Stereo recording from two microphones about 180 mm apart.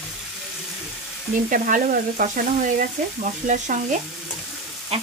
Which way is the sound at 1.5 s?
50° right (ahead or behind).